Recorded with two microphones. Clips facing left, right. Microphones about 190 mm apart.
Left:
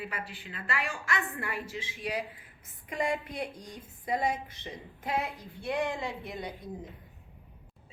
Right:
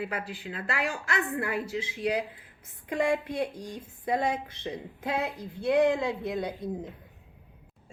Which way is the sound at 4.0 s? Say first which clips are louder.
Right 3 dB; 60° right (ahead or behind).